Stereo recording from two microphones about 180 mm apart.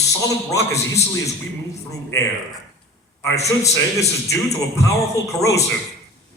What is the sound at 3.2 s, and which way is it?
A man's voice, 15° left (ahead or behind).